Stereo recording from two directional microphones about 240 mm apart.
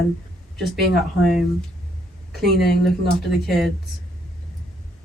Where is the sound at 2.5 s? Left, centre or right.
Left.